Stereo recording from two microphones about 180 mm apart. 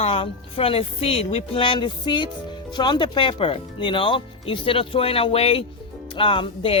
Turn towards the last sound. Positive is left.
turn(degrees=30)  # may be behind; listen again after turning